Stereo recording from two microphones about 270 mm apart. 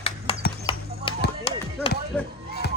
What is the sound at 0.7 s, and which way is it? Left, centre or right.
Basketball bounce, centre.